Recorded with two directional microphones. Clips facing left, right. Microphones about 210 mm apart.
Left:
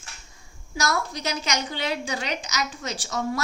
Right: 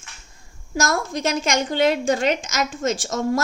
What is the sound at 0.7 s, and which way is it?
A woman's voice, 50° right (ahead or behind).